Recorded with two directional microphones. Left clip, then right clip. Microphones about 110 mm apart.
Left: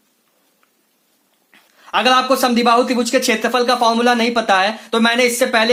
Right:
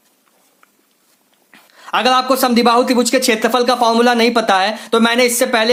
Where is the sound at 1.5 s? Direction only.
30° right (ahead or behind).